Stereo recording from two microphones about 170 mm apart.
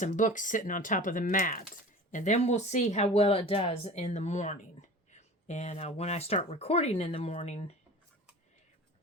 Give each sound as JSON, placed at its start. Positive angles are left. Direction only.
{"t": 0.0, "sound": "speech", "side_deg": 50}